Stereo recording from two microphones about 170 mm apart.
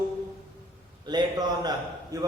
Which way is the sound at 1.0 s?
25° right (ahead or behind).